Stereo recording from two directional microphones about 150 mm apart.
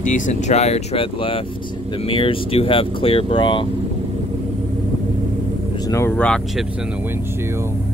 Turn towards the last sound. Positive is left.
turn(degrees=5)  # may be behind; listen again after turning